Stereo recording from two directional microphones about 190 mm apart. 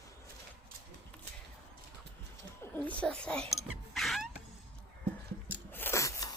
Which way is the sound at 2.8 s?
5° left (ahead or behind).